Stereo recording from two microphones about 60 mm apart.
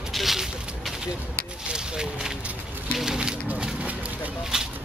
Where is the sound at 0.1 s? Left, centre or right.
Centre.